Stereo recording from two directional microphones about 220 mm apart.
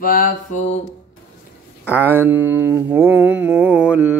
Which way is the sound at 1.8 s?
10° right (ahead or behind).